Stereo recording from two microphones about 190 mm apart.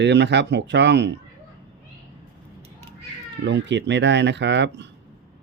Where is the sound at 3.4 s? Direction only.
65° right (ahead or behind).